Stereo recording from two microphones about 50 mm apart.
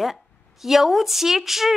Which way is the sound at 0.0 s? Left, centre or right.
Centre.